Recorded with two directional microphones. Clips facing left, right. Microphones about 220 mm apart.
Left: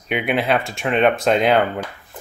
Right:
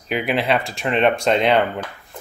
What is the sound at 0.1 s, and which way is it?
Speech, centre (ahead or behind).